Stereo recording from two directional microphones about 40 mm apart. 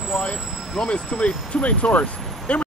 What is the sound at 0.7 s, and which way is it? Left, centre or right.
Speech, left.